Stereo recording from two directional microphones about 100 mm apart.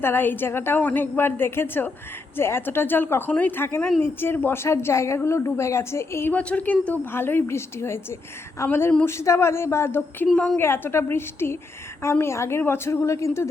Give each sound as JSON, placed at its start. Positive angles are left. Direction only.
{"t": 0.0, "sound": "a woman's voice", "side_deg": 20}
{"t": 6.3, "sound": "a woman's voice", "side_deg": 15}
{"t": 10.3, "sound": "a woman's voice", "side_deg": 10}
{"t": 10.6, "sound": "a woman's voice", "side_deg": 25}